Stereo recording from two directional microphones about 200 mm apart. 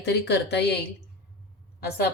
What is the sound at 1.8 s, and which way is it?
Speech, 50° left (ahead or behind).